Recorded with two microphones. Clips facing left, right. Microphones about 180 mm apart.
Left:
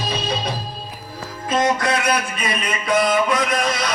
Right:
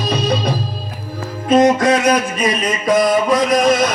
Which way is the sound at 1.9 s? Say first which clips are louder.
Right 7 dB; 40° right (ahead or behind).